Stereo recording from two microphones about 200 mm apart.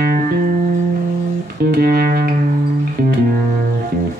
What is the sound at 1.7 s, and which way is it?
Music, 50° right (ahead or behind).